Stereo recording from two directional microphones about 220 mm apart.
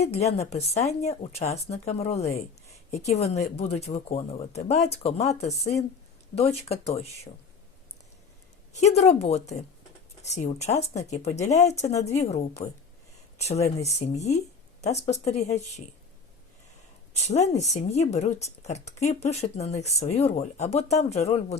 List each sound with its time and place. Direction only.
0.0 s speech: 30° left (ahead or behind)
3.3 s speech: 30° left (ahead or behind)
8.7 s speech: 30° left (ahead or behind)
13.8 s speech: 30° left (ahead or behind)
17.2 s speech: 30° left (ahead or behind)